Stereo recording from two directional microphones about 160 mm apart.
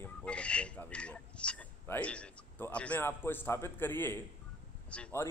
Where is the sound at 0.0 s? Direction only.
5° left (ahead or behind).